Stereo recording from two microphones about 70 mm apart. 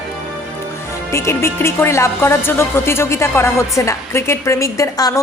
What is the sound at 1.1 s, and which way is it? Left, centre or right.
A woman's voice, left.